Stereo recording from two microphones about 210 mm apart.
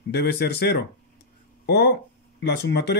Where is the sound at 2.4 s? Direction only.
50° left (ahead or behind).